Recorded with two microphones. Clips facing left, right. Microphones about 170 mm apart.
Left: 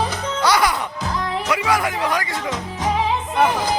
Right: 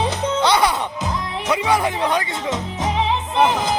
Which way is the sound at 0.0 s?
25° right (ahead or behind).